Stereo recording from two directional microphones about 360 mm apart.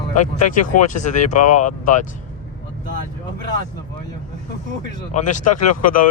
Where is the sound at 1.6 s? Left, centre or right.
Left.